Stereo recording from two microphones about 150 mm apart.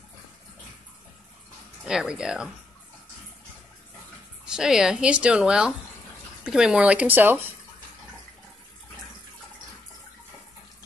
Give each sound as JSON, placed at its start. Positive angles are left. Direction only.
{"t": 1.9, "sound": "speech", "side_deg": -5}
{"t": 4.5, "sound": "speech", "side_deg": -5}